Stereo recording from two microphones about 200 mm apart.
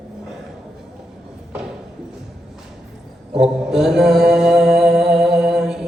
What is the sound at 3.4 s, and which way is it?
Mantra, centre (ahead or behind).